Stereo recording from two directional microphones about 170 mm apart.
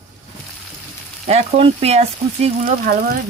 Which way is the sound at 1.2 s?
40° right (ahead or behind).